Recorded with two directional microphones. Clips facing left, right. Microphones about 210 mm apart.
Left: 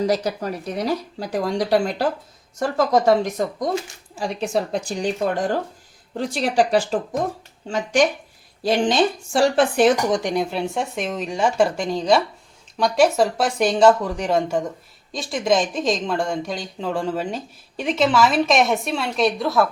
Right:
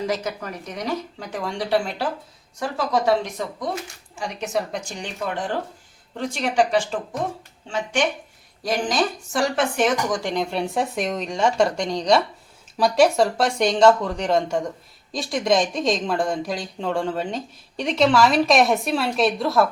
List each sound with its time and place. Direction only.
0.0 s speech: 35° left (ahead or behind)
4.1 s speech: 35° left (ahead or behind)
8.6 s speech: 25° left (ahead or behind)
10.2 s speech: 10° left (ahead or behind)